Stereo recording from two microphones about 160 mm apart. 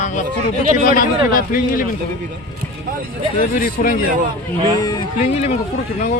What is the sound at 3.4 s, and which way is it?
Speech, 60° left (ahead or behind).